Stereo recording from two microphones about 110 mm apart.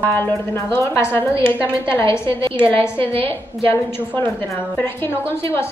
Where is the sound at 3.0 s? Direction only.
60° right (ahead or behind).